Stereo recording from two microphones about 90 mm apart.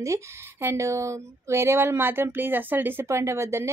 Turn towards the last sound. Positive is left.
turn(degrees=-30)  # may be behind; listen again after turning